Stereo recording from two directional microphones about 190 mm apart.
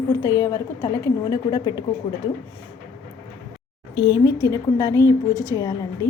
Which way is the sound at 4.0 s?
20° left (ahead or behind).